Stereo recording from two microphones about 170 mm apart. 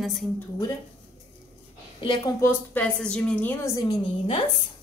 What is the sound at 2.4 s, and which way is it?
A woman's voice, 10° left (ahead or behind).